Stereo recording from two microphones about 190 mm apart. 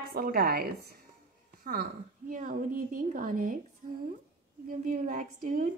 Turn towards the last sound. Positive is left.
turn(degrees=-45)  # may be behind; listen again after turning